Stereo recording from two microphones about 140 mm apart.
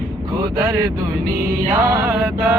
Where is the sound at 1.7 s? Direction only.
20° right (ahead or behind).